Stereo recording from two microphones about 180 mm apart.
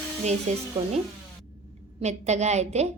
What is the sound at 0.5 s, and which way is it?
Speech, 40° right (ahead or behind).